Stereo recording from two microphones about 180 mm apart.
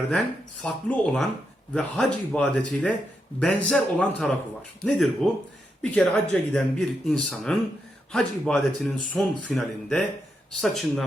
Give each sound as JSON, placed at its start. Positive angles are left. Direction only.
{"t": 0.6, "sound": "speech", "side_deg": 5}